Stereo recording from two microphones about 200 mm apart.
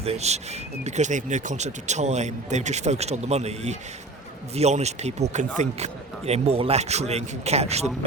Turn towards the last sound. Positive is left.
turn(degrees=-30)  # may be behind; listen again after turning